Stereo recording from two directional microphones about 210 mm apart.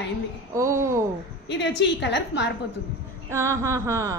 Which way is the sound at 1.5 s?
55° left (ahead or behind).